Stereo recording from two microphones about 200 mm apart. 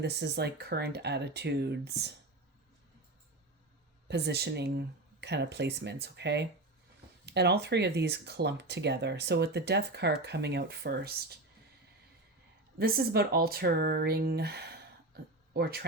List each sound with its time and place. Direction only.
0.0 s speech: 55° right (ahead or behind)
4.1 s speech: 55° right (ahead or behind)
12.8 s speech: 50° right (ahead or behind)